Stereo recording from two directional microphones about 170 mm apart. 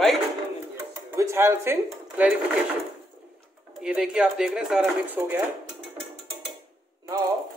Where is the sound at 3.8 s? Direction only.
5° right (ahead or behind).